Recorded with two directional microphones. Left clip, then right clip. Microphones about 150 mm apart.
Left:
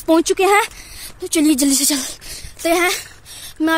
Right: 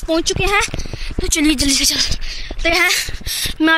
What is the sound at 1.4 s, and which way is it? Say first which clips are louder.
Speech: even; 20° left (ahead or behind).